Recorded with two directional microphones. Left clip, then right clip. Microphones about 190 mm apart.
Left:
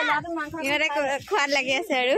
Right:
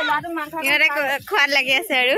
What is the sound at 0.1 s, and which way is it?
Speech, 10° left (ahead or behind).